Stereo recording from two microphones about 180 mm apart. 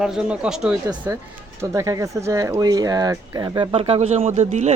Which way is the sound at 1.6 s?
15° right (ahead or behind).